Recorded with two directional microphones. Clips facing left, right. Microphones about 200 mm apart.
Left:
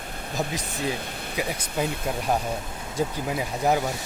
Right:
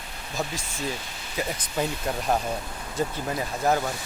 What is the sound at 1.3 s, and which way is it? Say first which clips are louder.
Speech: even; 10° left (ahead or behind).